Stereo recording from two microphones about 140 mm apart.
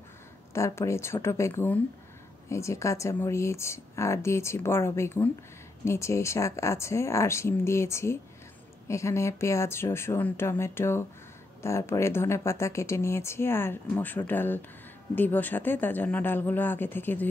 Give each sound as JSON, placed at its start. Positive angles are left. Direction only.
{"t": 0.5, "sound": "speech", "side_deg": 20}